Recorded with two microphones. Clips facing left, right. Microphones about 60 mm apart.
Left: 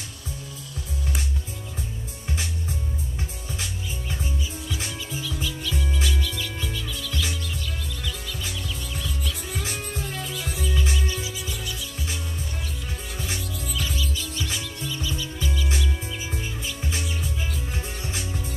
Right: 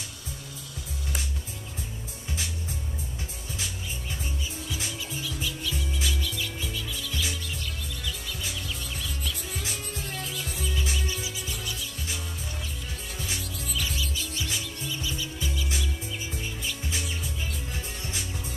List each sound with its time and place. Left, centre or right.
5.2 s music: centre
9.6 s music: left
13.8 s music: centre
17.7 s music: left